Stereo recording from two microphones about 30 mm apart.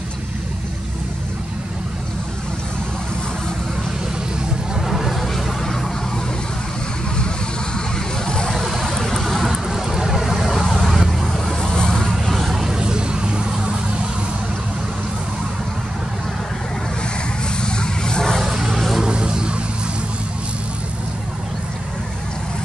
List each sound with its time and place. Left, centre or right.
4.8 s a sound: centre
7.2 s vehicle: left
8.8 s vehicle: centre
9.4 s vehicle: centre
11.6 s vehicle: left
11.9 s vehicle: centre
12.5 s vehicle: centre
17.6 s a sound: left
18.5 s vehicle: centre
19.0 s vehicle: right